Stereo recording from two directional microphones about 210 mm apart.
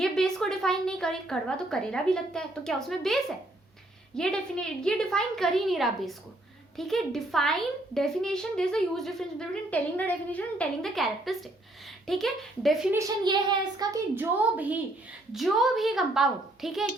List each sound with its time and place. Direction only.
0.0 s a woman's voice: centre (ahead or behind)
4.2 s a woman's voice: 5° left (ahead or behind)
12.9 s a child's voice: 15° right (ahead or behind)